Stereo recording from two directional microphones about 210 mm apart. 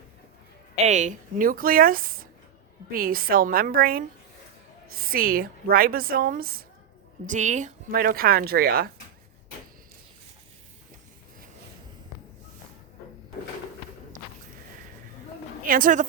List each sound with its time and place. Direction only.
0.9 s a woman's voice: 35° right (ahead or behind)
15.6 s a woman's voice: 40° right (ahead or behind)